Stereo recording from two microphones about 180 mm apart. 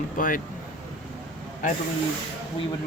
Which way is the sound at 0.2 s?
50° left (ahead or behind).